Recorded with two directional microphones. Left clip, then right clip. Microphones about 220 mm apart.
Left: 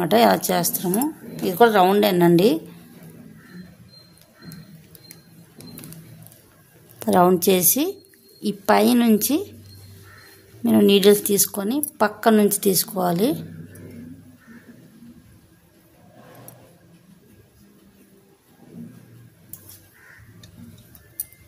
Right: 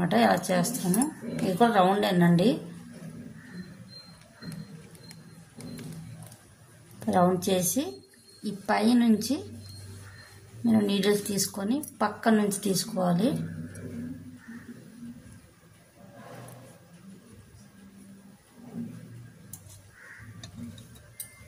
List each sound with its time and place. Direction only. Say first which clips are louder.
0.0 s speech: left 7 dB; 55° left (ahead or behind)
7.0 s speech: left 8 dB; 55° left (ahead or behind)
10.6 s speech: left 11 dB; 55° left (ahead or behind)